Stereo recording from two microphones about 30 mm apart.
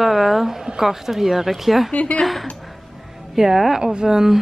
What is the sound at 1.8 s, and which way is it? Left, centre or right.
Speech, left.